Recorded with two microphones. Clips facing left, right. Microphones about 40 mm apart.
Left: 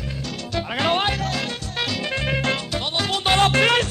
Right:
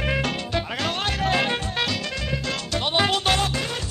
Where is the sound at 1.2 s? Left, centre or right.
Right.